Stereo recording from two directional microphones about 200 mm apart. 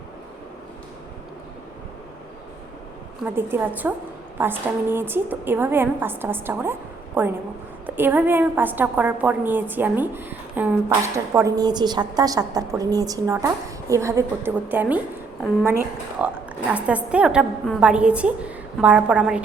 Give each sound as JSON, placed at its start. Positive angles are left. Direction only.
{"t": 3.2, "sound": "a woman's voice", "side_deg": -10}